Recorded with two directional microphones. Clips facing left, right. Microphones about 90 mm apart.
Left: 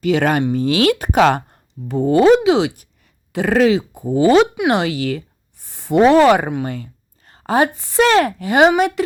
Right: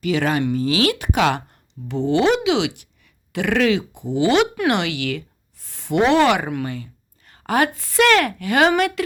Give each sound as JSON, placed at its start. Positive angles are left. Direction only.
{"t": 0.0, "sound": "speech", "side_deg": 40}